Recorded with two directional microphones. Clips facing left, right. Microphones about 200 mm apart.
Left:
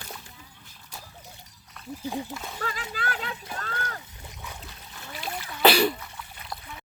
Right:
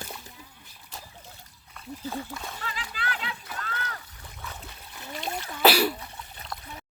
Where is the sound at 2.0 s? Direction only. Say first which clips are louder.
Left 2 dB; 15° left (ahead or behind).